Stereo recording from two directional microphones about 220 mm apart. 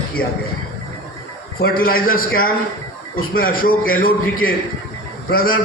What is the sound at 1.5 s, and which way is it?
Speech, 40° left (ahead or behind).